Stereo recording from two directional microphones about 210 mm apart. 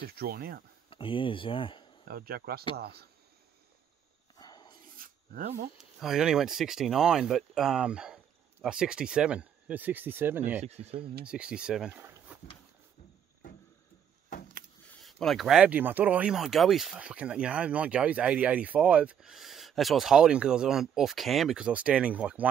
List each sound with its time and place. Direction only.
0.0 s speech: 45° right (ahead or behind)
0.8 s speech: 25° left (ahead or behind)
2.0 s speech: 45° right (ahead or behind)
4.4 s a sound: 20° left (ahead or behind)
4.9 s filing: 45° right (ahead or behind)
5.8 s speech: centre (ahead or behind)
10.9 s speech: 25° right (ahead or behind)
11.2 s speech: 5° right (ahead or behind)
14.9 s speech: centre (ahead or behind)